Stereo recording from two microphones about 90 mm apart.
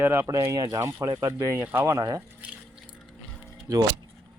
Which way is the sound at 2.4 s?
15° right (ahead or behind).